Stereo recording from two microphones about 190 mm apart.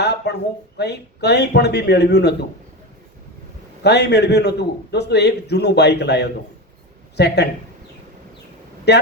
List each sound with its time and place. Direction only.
0.0 s a sound: 60° left (ahead or behind)
0.8 s a man's voice: 60° left (ahead or behind)
3.8 s a man's voice: 60° left (ahead or behind)
8.9 s a man's voice: 60° left (ahead or behind)